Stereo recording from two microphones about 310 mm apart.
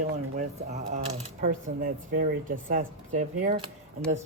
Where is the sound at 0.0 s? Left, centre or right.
Right.